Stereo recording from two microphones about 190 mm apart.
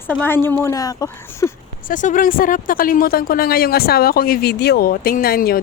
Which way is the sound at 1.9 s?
45° left (ahead or behind).